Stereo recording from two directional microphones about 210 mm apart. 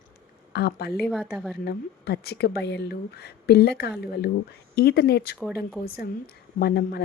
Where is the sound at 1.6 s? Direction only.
50° left (ahead or behind).